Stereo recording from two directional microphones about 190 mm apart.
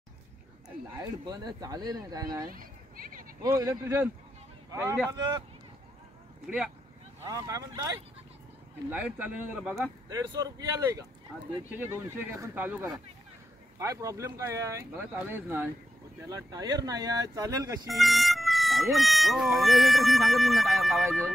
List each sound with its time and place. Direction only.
1.2 s speech: 20° right (ahead or behind)
2.5 s a sound: 45° right (ahead or behind)
3.5 s speech: 15° right (ahead or behind)
6.4 s speech: 5° right (ahead or behind)
7.2 s speech: 20° right (ahead or behind)
8.9 s speech: 5° right (ahead or behind)
10.0 s speech: 20° right (ahead or behind)
17.8 s speech: centre (ahead or behind)